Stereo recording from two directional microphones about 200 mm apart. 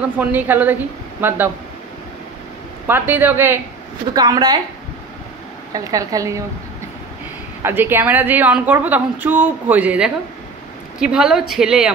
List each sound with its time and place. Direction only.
0.2 s a woman's voice: 10° right (ahead or behind)
2.9 s a woman's voice: 10° right (ahead or behind)
5.7 s a woman's voice: 15° right (ahead or behind)
7.6 s a woman's voice: 10° right (ahead or behind)